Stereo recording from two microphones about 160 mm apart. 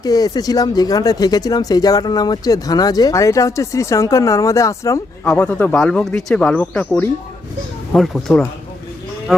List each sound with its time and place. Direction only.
0.0 s speech: 25° left (ahead or behind)
5.3 s speech: 10° left (ahead or behind)